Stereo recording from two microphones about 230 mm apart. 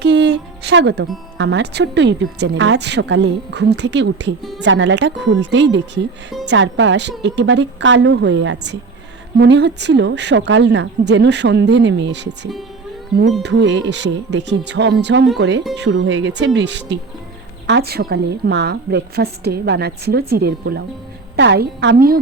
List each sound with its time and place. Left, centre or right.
0.0 s a woman's voice: right